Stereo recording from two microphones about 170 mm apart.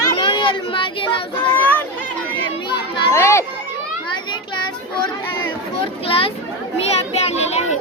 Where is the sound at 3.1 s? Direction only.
15° left (ahead or behind).